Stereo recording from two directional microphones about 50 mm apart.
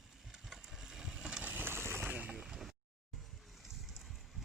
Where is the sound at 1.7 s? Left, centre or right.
Right.